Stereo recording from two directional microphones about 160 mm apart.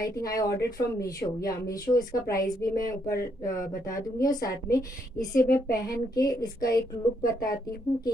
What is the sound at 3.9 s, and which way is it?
A woman's voice, 20° left (ahead or behind).